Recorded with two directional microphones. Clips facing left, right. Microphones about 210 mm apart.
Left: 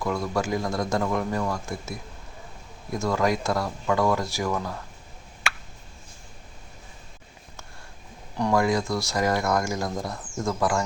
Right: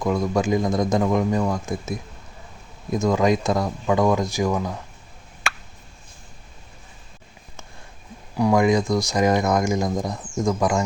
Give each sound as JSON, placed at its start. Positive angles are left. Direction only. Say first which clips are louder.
{"t": 0.0, "sound": "speech", "louder": "right 5 dB", "side_deg": -20}
{"t": 8.4, "sound": "speech", "louder": "right 5 dB", "side_deg": -15}